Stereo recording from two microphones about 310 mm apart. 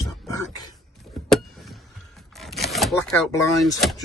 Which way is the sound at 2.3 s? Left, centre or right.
Centre.